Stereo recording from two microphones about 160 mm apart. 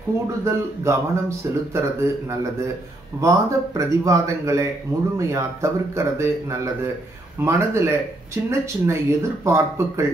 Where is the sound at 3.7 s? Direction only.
20° right (ahead or behind).